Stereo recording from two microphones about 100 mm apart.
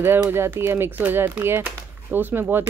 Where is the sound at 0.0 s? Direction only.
20° right (ahead or behind).